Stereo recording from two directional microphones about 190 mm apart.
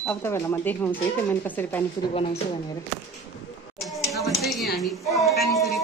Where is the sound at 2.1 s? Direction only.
30° left (ahead or behind).